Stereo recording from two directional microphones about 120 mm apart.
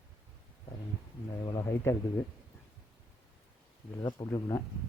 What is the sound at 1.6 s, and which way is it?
Speech, 25° left (ahead or behind).